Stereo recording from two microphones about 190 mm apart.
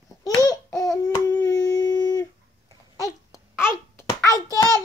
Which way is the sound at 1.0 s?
20° left (ahead or behind).